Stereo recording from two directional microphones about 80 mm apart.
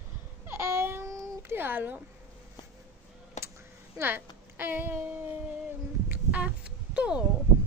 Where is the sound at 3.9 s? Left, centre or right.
Right.